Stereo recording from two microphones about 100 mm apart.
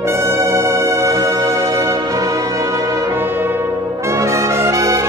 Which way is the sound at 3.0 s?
20° right (ahead or behind).